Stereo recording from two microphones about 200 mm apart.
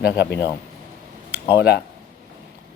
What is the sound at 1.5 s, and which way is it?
Speech, 55° left (ahead or behind).